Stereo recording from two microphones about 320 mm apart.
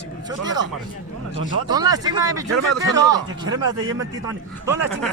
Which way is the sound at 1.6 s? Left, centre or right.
Centre.